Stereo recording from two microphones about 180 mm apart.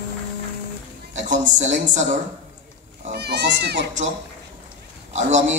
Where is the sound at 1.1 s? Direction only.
45° right (ahead or behind).